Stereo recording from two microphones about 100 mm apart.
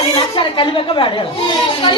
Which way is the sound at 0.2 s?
60° left (ahead or behind).